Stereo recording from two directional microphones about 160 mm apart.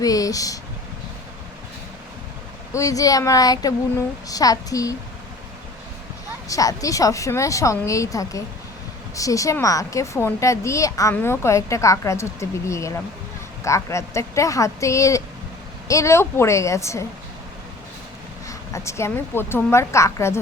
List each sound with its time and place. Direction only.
0.0 s speech: 20° left (ahead or behind)
2.7 s speech: 20° left (ahead or behind)
6.5 s a woman's voice: 20° left (ahead or behind)
18.4 s a woman's voice: 20° left (ahead or behind)